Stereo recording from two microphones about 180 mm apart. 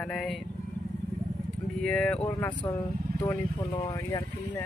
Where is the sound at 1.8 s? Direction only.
5° left (ahead or behind); by 4.2 s 20° left (ahead or behind).